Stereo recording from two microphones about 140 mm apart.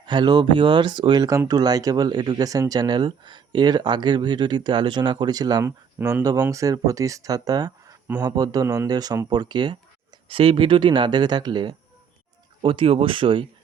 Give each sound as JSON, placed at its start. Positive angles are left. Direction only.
{"t": 0.0, "sound": "speech", "side_deg": -30}
{"t": 5.6, "sound": "speech", "side_deg": -15}